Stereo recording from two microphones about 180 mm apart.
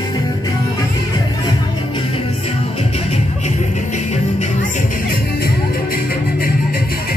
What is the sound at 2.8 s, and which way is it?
Music, 35° left (ahead or behind).